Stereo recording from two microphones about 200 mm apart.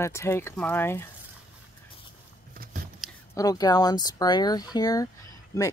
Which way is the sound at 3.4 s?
20° left (ahead or behind).